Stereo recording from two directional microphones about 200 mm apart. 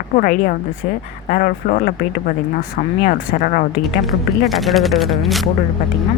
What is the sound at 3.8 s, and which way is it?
Speech, centre (ahead or behind).